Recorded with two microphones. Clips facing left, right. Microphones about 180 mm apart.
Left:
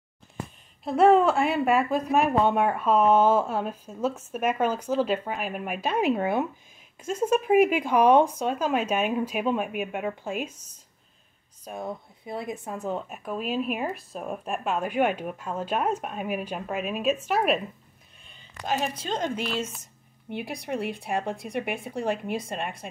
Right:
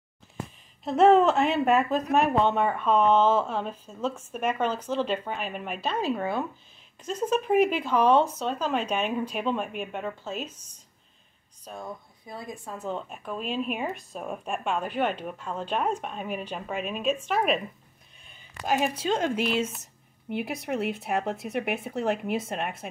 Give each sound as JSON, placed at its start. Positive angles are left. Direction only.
{"t": 0.8, "sound": "speech", "side_deg": 10}
{"t": 7.0, "sound": "speech", "side_deg": 10}
{"t": 11.6, "sound": "speech", "side_deg": 20}
{"t": 12.8, "sound": "speech", "side_deg": 10}